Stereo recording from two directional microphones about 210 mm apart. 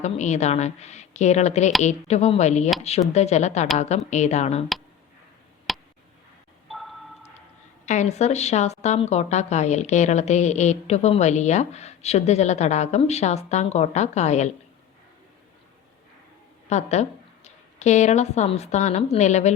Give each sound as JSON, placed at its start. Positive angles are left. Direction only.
{"t": 0.0, "sound": "speech", "side_deg": 35}
{"t": 5.7, "sound": "tick", "side_deg": 0}
{"t": 6.7, "sound": "marimba", "side_deg": 0}
{"t": 7.9, "sound": "speech", "side_deg": 35}
{"t": 16.6, "sound": "speech", "side_deg": 30}